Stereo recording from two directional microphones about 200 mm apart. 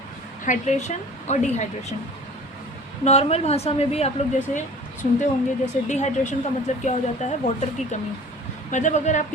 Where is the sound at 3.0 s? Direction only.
35° left (ahead or behind).